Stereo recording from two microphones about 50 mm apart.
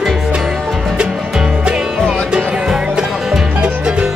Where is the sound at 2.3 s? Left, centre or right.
Centre.